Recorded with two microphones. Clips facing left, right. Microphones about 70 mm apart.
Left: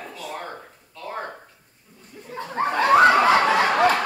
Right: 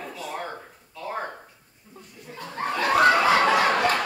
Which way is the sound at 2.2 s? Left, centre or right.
Left.